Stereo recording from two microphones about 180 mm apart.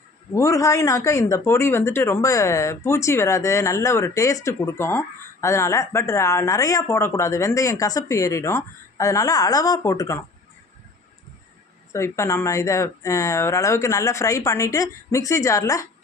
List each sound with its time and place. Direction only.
0.3 s speech: 15° left (ahead or behind)
11.9 s speech: 15° left (ahead or behind)